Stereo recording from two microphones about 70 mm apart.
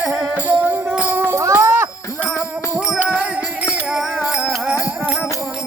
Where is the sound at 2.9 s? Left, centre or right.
Right.